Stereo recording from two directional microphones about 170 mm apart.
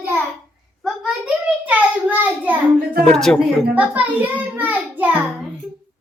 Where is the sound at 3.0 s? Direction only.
5° left (ahead or behind).